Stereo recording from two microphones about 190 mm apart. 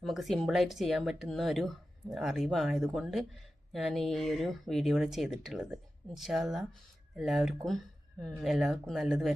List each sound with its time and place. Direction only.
0.0 s speech: centre (ahead or behind)